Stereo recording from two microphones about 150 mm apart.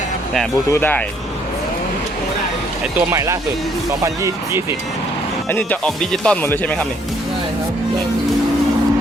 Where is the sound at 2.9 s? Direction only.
20° right (ahead or behind).